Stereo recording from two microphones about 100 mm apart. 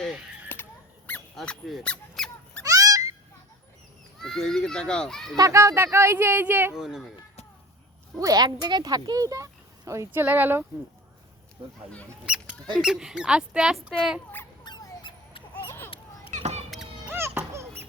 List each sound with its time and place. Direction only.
0.4 s squeak: 20° left (ahead or behind)
1.4 s squeak: centre (ahead or behind)
2.6 s cat: 35° right (ahead or behind)
4.2 s speech: 5° left (ahead or behind)
5.4 s speech: 30° right (ahead or behind)
6.7 s speech: 5° right (ahead or behind)
8.2 s speech: 40° right (ahead or behind)
10.2 s speech: 20° right (ahead or behind)
12.2 s speech: 10° right (ahead or behind)
14.6 s dog: 45° left (ahead or behind)
16.4 s a sound: 90° right
17.1 s music: 25° right (ahead or behind)